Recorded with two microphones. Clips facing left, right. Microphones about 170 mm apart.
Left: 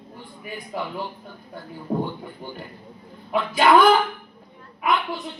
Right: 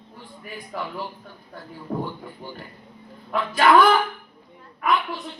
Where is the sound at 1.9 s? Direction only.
15° left (ahead or behind).